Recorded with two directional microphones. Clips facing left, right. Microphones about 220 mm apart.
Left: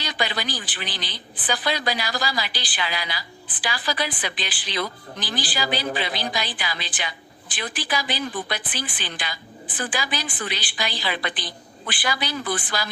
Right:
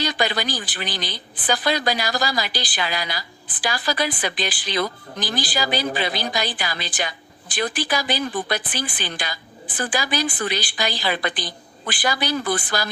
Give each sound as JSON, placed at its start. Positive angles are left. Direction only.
{"t": 0.0, "sound": "a man's voice", "side_deg": -45}